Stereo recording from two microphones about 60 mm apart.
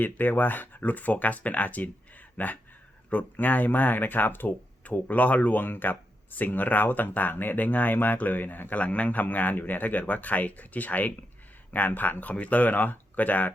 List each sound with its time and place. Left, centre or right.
0.0 s speech: left